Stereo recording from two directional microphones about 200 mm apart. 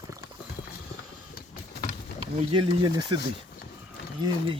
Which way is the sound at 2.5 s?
25° right (ahead or behind).